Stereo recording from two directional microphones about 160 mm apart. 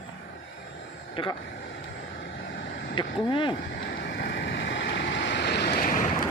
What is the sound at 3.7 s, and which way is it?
Vehicle, 65° left (ahead or behind).